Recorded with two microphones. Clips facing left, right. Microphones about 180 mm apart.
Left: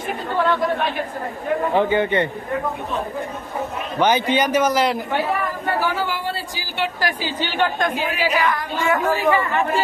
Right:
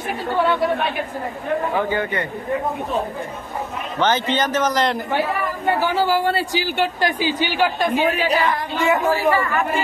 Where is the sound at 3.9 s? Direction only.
10° left (ahead or behind).